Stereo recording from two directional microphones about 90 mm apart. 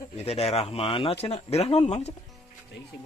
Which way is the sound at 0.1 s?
90° left.